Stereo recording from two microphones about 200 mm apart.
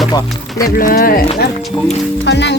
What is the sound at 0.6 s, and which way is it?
Speech, 45° left (ahead or behind).